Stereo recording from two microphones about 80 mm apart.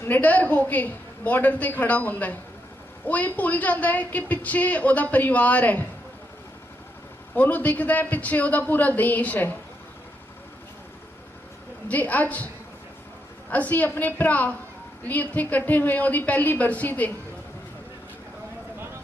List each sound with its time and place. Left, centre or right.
0.0 s a woman's voice: left
7.3 s a woman's voice: left
11.9 s a woman's voice: centre
13.5 s a woman's voice: left